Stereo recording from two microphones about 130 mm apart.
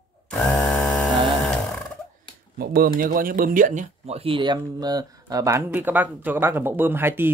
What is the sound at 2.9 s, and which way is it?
Speech, 90° right.